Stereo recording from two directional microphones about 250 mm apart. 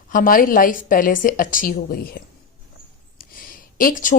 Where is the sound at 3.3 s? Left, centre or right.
Left.